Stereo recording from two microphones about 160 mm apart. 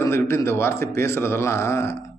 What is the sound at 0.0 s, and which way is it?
Speech, 15° left (ahead or behind).